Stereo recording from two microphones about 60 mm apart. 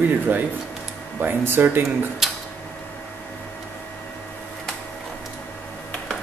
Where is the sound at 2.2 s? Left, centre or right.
Centre.